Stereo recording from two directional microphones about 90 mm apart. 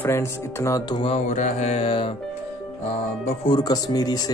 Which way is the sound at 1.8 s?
90° left.